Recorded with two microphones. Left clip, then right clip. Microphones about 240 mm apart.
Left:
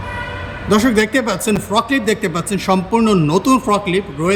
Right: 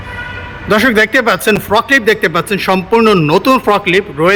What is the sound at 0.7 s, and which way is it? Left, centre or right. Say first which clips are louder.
A man's voice: right 5 dB; centre.